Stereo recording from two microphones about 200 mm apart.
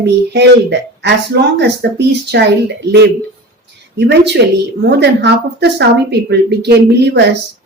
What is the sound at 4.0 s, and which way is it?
Speech, 60° right (ahead or behind).